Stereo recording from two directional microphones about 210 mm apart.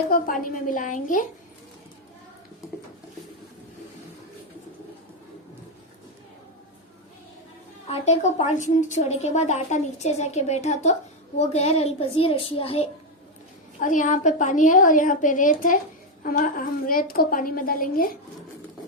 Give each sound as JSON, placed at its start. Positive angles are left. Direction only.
{"t": 0.1, "sound": "a woman's voice", "side_deg": 40}
{"t": 7.9, "sound": "a woman's voice", "side_deg": 30}
{"t": 13.7, "sound": "a woman's voice", "side_deg": 40}